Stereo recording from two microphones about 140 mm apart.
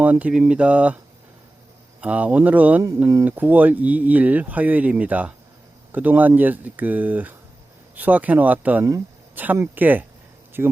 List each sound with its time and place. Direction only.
0.0 s speech: 10° right (ahead or behind)
2.0 s speech: 10° right (ahead or behind)
3.0 s speech: 20° right (ahead or behind)
3.2 s speech: 10° right (ahead or behind)